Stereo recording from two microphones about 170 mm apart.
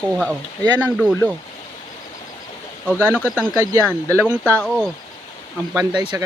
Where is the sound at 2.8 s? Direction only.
10° right (ahead or behind).